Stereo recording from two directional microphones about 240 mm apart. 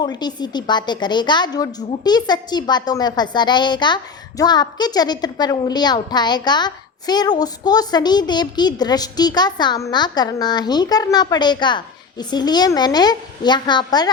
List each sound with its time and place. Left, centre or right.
0.0 s a woman's voice: centre